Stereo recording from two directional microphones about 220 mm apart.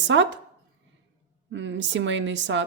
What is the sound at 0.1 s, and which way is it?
Speech, 55° right (ahead or behind).